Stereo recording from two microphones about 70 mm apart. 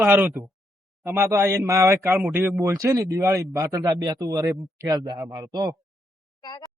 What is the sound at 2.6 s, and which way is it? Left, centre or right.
Speech, right.